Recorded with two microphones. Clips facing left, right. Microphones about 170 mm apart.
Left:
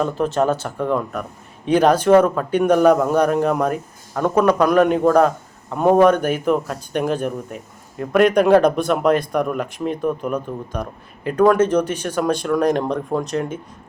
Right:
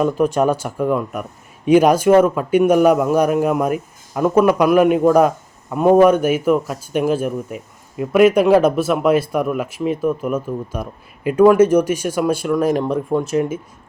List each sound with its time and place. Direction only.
0.0 s a man's voice: 10° right (ahead or behind)